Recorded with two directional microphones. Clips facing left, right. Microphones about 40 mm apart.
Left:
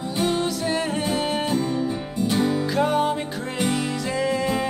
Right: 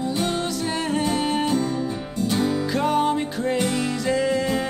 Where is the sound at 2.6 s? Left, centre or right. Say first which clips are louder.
Even; centre.